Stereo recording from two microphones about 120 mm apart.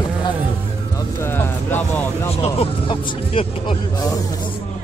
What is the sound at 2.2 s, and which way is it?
Music, 55° left (ahead or behind).